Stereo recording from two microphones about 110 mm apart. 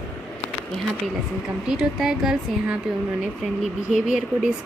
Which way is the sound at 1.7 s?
5° right (ahead or behind).